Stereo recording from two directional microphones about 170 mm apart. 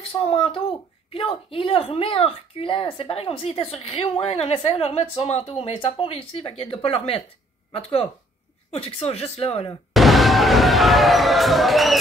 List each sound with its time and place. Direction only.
0.1 s speech: 35° left (ahead or behind)
9.9 s basketball bounce: centre (ahead or behind)